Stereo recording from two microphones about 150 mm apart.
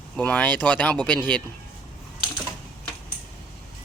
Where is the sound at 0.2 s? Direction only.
5° left (ahead or behind).